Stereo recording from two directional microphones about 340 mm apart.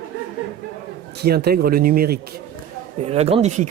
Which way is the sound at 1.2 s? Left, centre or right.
Right.